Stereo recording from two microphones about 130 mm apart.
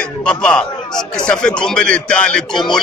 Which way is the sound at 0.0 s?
5° left (ahead or behind).